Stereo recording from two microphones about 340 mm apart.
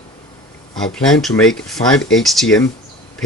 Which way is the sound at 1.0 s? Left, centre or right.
Centre.